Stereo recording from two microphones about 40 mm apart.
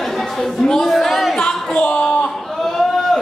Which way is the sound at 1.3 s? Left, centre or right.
Left.